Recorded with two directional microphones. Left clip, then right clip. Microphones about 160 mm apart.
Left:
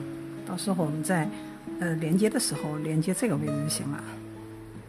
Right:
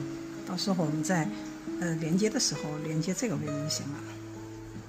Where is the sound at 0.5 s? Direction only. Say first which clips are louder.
Left 1 dB; 15° left (ahead or behind).